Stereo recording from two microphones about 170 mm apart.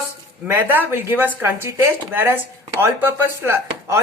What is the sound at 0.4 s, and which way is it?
Speech, 10° right (ahead or behind).